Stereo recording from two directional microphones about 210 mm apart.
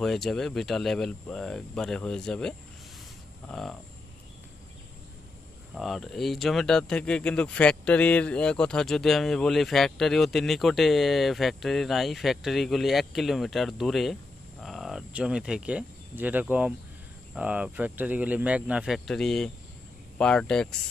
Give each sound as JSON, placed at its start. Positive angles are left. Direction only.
{"t": 0.0, "sound": "speech", "side_deg": 0}
{"t": 5.8, "sound": "speech", "side_deg": 0}